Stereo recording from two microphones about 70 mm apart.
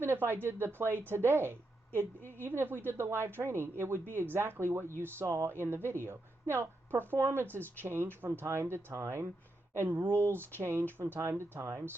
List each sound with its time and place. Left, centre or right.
0.0 s a woman's voice: right